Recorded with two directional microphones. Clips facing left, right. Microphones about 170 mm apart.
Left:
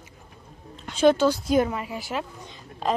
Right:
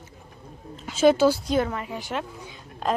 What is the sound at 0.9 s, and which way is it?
Speech, 5° right (ahead or behind).